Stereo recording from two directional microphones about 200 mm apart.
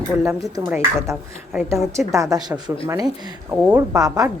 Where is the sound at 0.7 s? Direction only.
10° right (ahead or behind).